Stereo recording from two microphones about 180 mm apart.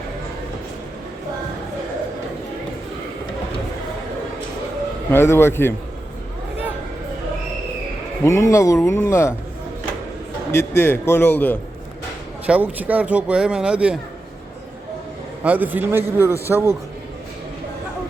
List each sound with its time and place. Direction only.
5.1 s speech: 15° left (ahead or behind)
8.2 s speech: 15° left (ahead or behind)
10.5 s speech: 15° left (ahead or behind)
12.5 s speech: 10° right (ahead or behind)
15.4 s speech: 10° right (ahead or behind)